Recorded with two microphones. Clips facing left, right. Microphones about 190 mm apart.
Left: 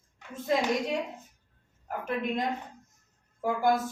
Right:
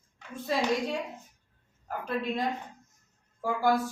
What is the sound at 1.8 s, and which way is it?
A woman's voice, 20° left (ahead or behind).